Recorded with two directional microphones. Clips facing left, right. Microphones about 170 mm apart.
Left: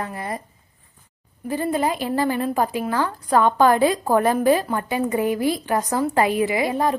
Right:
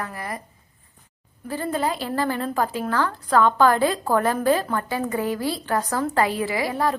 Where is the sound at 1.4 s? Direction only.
15° left (ahead or behind).